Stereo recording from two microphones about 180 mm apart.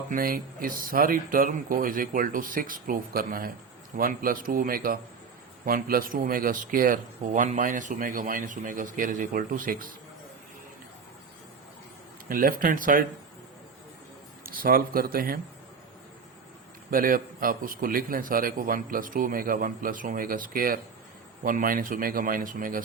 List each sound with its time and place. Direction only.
0.1 s a man's voice: 50° right (ahead or behind)
12.3 s a man's voice: 50° right (ahead or behind)
14.4 s a man's voice: 50° right (ahead or behind)
16.9 s a man's voice: 50° right (ahead or behind)